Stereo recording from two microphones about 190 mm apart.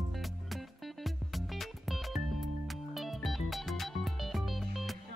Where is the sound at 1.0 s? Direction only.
Centre (ahead or behind).